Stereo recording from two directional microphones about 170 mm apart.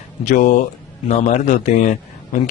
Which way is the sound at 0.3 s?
45° left (ahead or behind).